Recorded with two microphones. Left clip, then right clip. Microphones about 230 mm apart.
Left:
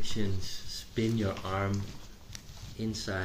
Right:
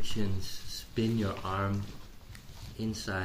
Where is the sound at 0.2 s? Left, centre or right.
Centre.